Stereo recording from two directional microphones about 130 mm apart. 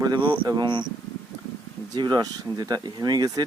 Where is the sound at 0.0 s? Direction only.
35° right (ahead or behind).